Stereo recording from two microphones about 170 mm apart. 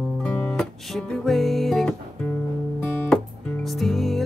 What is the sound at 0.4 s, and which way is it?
Music, 5° left (ahead or behind).